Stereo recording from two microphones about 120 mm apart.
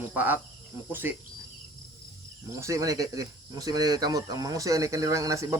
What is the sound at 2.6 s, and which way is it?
Speech, 25° right (ahead or behind).